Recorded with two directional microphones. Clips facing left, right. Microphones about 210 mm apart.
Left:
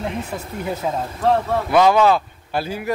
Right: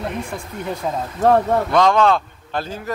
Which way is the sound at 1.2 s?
45° right (ahead or behind).